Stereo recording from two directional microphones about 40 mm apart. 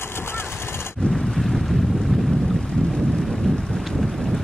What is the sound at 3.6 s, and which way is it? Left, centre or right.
Wind noise, centre.